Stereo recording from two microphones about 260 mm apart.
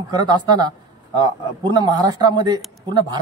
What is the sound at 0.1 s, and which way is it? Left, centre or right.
A man's voice, centre.